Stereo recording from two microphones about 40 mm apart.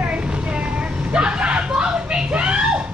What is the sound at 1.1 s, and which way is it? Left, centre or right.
Vehicle, right.